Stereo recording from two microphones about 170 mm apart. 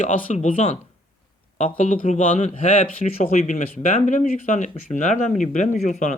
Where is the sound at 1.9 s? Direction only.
50° left (ahead or behind).